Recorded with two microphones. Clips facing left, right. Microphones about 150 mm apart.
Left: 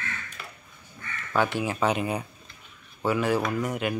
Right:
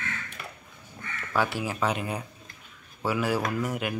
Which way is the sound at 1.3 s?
5° right (ahead or behind).